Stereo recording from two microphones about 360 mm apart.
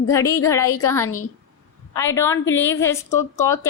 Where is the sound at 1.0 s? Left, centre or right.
Left.